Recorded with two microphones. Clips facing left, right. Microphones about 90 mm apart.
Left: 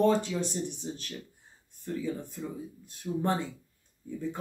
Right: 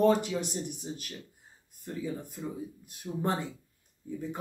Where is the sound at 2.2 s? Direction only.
15° right (ahead or behind).